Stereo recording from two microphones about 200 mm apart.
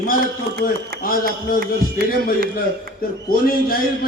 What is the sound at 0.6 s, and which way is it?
Speech, 45° left (ahead or behind).